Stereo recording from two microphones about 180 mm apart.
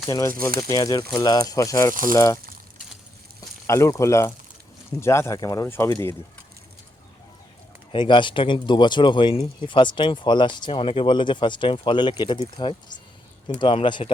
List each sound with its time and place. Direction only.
0.1 s speech: 20° left (ahead or behind)
3.7 s speech: 15° left (ahead or behind)
7.9 s speech: 25° left (ahead or behind)